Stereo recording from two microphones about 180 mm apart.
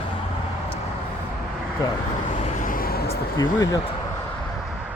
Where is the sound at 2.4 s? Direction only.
50° left (ahead or behind).